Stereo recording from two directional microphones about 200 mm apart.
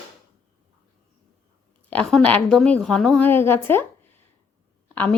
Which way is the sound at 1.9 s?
Centre (ahead or behind).